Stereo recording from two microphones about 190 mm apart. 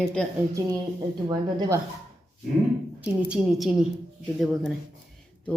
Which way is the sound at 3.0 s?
5° right (ahead or behind).